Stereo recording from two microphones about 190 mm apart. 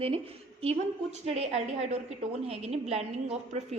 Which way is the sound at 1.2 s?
35° right (ahead or behind).